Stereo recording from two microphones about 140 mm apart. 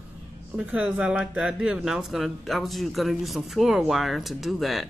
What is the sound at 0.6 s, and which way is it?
Speech, 10° right (ahead or behind).